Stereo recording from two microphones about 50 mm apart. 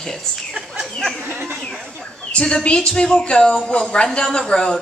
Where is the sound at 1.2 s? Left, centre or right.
Right.